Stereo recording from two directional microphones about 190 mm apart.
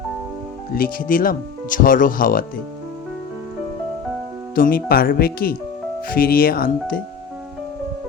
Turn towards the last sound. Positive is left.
turn(degrees=50)  # may be behind; listen again after turning